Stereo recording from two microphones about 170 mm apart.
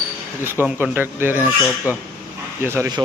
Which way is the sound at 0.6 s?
10° right (ahead or behind).